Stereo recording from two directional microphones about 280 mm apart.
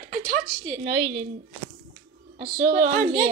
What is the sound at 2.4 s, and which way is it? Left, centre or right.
Speech, right.